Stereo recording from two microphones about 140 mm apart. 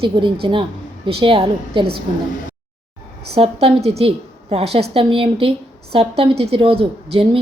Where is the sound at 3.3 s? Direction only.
45° right (ahead or behind).